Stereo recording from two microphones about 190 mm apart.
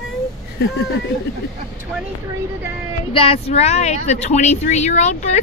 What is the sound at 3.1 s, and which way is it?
Speech, 30° left (ahead or behind).